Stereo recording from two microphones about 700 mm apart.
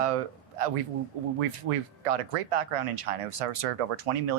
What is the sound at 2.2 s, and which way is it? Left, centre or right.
Speech, right.